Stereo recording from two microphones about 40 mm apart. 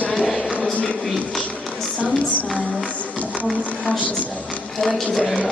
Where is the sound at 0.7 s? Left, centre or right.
Left.